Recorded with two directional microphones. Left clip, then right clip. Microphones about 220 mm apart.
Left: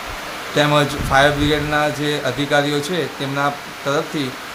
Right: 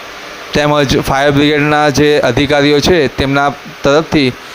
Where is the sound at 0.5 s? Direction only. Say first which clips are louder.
Right 6 dB; 40° right (ahead or behind).